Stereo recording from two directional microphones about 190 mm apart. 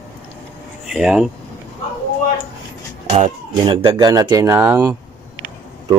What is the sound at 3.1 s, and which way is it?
Speech, 35° right (ahead or behind).